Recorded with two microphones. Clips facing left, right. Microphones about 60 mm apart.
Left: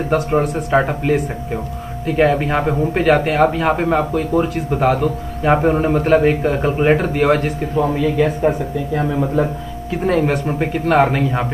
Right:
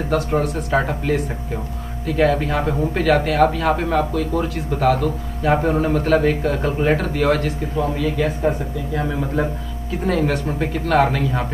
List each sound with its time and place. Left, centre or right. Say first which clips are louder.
0.1 s a man's voice: left 3 dB; left
7.8 s a man's voice: left 4 dB; left
10.0 s a man's voice: left 3 dB; left